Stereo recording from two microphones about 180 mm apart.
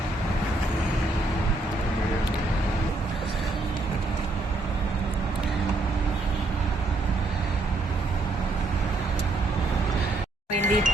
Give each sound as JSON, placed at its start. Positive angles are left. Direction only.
{"t": 10.5, "sound": "speech", "side_deg": -40}